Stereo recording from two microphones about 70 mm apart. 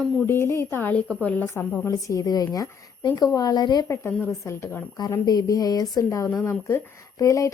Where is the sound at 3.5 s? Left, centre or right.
Left.